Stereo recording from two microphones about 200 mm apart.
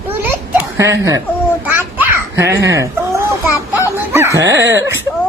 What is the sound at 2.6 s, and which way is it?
Speech, 15° right (ahead or behind).